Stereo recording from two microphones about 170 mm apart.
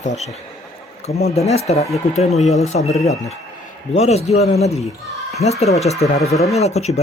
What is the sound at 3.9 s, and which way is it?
Speech, 40° left (ahead or behind).